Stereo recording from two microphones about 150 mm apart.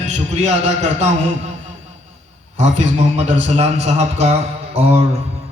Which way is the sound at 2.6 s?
50° right (ahead or behind).